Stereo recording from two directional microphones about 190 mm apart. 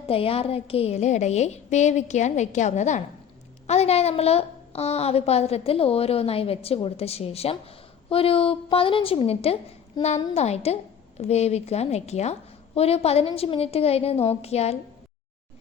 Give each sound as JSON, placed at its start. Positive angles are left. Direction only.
{"t": 0.1, "sound": "a woman's voice", "side_deg": 30}